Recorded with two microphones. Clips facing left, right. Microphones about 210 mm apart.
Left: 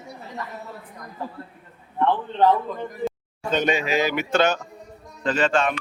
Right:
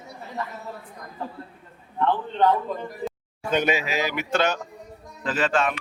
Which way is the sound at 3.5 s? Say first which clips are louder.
Left 2 dB; 10° right (ahead or behind).